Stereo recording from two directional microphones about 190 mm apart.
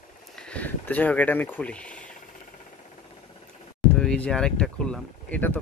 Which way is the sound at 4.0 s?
5° left (ahead or behind).